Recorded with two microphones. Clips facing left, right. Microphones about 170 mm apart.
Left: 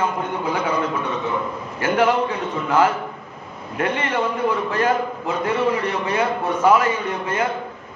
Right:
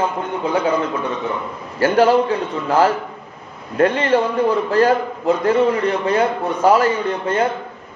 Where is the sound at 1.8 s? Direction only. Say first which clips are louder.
Right 5 dB; 35° right (ahead or behind).